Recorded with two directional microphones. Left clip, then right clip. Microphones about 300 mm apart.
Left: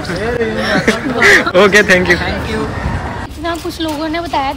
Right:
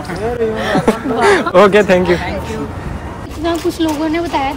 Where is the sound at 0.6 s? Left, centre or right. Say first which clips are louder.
Left 1 dB; centre.